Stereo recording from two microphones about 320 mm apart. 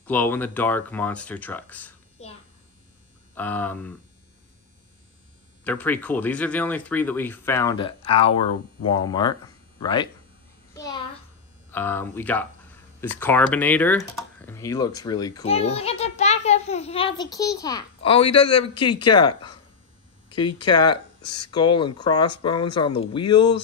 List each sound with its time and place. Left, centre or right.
0.0 s speech: centre
3.3 s speech: centre
5.6 s a child's voice: centre
10.7 s a sound: centre
11.7 s a child's voice: centre